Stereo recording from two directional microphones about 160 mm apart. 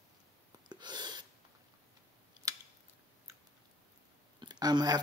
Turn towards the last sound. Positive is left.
turn(degrees=-25)  # may be behind; listen again after turning